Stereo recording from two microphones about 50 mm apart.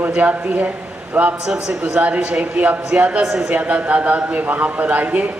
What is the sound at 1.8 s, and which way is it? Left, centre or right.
A man's voice, right.